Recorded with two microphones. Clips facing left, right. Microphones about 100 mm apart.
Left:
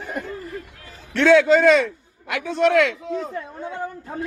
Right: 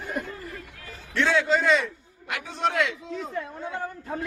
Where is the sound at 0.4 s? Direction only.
30° left (ahead or behind).